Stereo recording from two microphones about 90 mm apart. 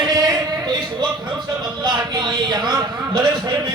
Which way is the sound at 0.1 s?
45° right (ahead or behind).